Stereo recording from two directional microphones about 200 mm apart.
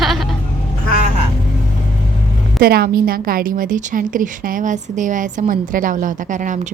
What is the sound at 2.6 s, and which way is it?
A woman's voice, 50° right (ahead or behind).